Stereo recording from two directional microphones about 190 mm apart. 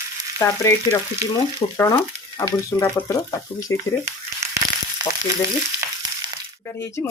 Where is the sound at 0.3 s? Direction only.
15° left (ahead or behind).